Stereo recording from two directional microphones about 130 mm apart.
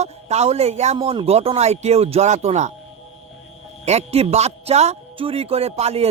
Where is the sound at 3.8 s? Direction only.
55° right (ahead or behind).